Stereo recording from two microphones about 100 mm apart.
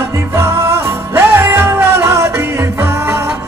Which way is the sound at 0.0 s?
30° right (ahead or behind).